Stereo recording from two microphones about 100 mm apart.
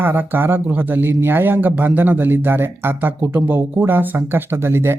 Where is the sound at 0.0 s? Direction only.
20° right (ahead or behind).